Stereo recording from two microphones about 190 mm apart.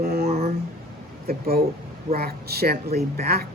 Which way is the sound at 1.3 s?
50° right (ahead or behind).